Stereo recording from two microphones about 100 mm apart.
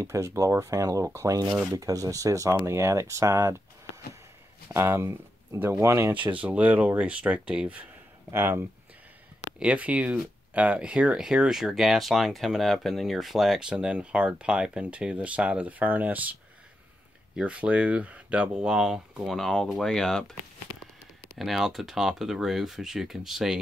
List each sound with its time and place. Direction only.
0.0 s speech: 30° right (ahead or behind)
4.6 s speech: 25° right (ahead or behind)
6.3 s speech: 15° right (ahead or behind)
8.3 s speech: 25° right (ahead or behind)
9.6 s speech: 15° right (ahead or behind)
17.4 s speech: 15° right (ahead or behind); by 20.3 s 5° left (ahead or behind)
21.4 s speech: centre (ahead or behind)